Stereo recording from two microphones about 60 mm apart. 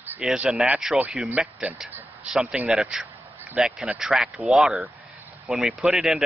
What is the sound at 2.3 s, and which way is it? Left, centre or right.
Speech, centre.